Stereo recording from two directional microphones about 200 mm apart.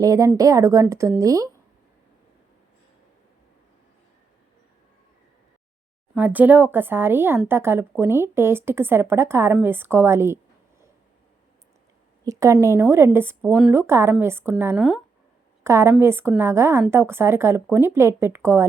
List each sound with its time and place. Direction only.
0.0 s speech: 15° right (ahead or behind)
6.1 s speech: 10° right (ahead or behind)
12.2 s a woman's voice: 15° right (ahead or behind)
15.6 s speech: 15° right (ahead or behind)